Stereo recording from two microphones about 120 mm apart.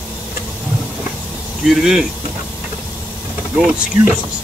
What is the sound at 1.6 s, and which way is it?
Speech, 5° right (ahead or behind).